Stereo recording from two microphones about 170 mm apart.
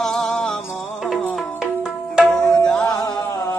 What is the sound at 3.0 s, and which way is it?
Music, 20° left (ahead or behind).